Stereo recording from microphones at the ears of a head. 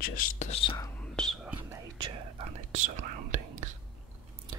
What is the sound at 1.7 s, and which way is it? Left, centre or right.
Whispering, right.